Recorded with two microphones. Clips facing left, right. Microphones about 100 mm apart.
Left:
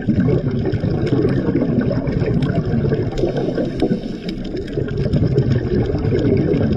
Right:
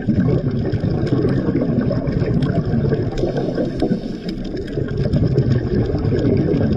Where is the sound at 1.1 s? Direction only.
5° right (ahead or behind).